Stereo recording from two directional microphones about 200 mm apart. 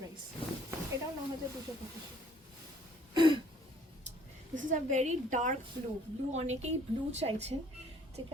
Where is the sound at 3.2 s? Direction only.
25° right (ahead or behind).